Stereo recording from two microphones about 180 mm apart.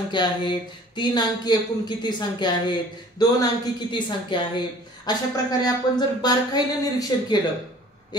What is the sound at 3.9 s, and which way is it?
Speech, 25° left (ahead or behind).